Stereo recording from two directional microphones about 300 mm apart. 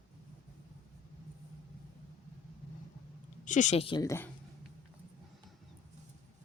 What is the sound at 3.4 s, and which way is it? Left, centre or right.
Speech, left.